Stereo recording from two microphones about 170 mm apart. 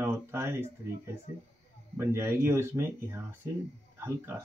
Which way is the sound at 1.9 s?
15° right (ahead or behind).